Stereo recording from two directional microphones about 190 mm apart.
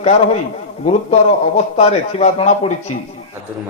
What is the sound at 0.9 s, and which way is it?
A man's voice, 35° left (ahead or behind).